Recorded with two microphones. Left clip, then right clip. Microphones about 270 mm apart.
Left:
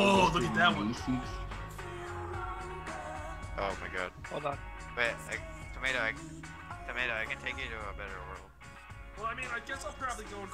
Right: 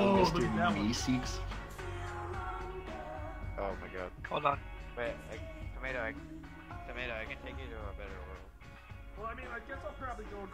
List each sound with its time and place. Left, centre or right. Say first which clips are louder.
0.1 s a sound: left 3 dB; left
0.7 s speech: right 1 dB; right
1.5 s music: left 1 dB; centre
3.5 s music: left 4 dB; left
4.3 s speech: right 8 dB; right
4.9 s speech: left 6 dB; left
6.9 s speech: left 7 dB; left
7.4 s speech: left 8 dB; left
9.2 s speech: left 6 dB; left